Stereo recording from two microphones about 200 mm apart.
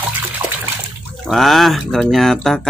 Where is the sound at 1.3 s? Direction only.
Centre (ahead or behind).